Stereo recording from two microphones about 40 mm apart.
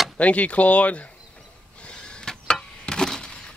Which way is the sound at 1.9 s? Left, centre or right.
Left.